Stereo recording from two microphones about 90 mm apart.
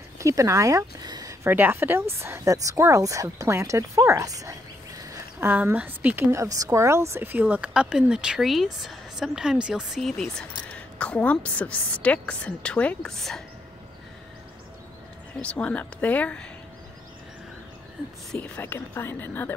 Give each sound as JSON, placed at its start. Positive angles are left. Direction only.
{"t": 0.2, "sound": "speech", "side_deg": -35}
{"t": 1.0, "sound": "a sound", "side_deg": -50}
{"t": 1.5, "sound": "speech", "side_deg": -20}
{"t": 5.0, "sound": "a sound", "side_deg": -35}
{"t": 5.5, "sound": "speech", "side_deg": -20}
{"t": 6.3, "sound": "speech", "side_deg": -40}
{"t": 9.9, "sound": "speech", "side_deg": 5}
{"t": 10.6, "sound": "a woman's voice", "side_deg": 15}
{"t": 15.4, "sound": "a woman's voice", "side_deg": 15}
{"t": 18.6, "sound": "speech", "side_deg": 25}